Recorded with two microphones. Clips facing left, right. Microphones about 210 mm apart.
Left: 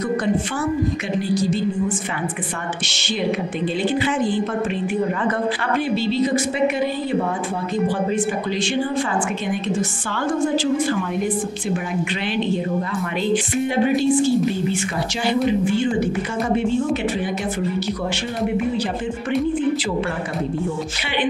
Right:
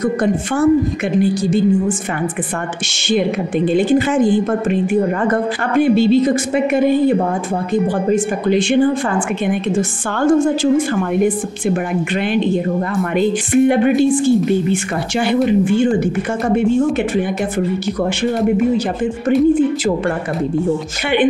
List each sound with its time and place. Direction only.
1.2 s a woman's voice: 50° right (ahead or behind)
3.7 s a woman's voice: 45° right (ahead or behind)
5.8 s a woman's voice: 50° right (ahead or behind)
13.3 s a woman's voice: 55° right (ahead or behind)